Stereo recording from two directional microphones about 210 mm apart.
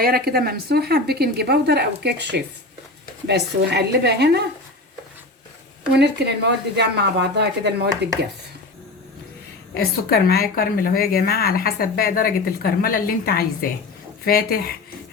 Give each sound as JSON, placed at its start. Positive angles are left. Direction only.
{"t": 0.0, "sound": "a woman's voice", "side_deg": -45}
{"t": 5.9, "sound": "a woman's voice", "side_deg": -55}
{"t": 10.1, "sound": "a woman's voice", "side_deg": 45}